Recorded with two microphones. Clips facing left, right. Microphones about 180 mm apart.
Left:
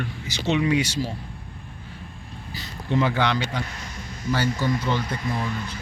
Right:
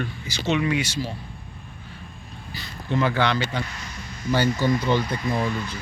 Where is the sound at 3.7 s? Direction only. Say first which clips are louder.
Even; 50° left (ahead or behind).